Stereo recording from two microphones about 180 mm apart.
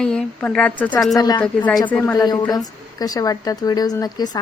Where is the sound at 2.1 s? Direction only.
20° left (ahead or behind).